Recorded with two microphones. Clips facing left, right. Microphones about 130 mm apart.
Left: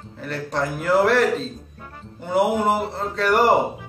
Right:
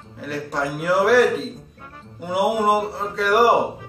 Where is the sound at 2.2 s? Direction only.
5° right (ahead or behind).